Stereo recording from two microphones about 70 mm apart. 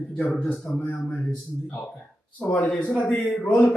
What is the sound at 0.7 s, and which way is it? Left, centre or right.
Speech, centre.